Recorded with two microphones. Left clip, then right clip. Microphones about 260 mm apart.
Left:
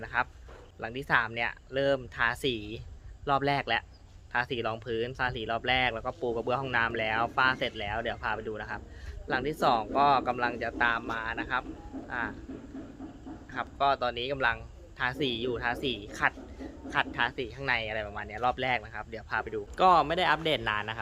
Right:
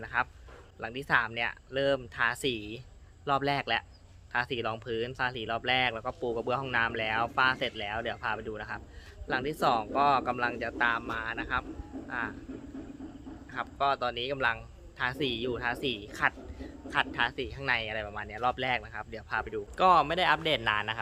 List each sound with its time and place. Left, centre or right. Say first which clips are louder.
0.0 s a man's voice: even; centre
13.5 s a man's voice: left 2 dB; centre